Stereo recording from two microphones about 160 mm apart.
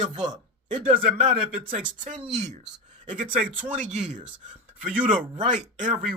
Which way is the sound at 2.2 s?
45° right (ahead or behind).